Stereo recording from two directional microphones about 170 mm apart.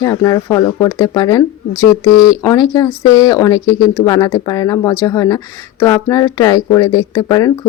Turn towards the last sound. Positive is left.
turn(degrees=20)  # may be behind; listen again after turning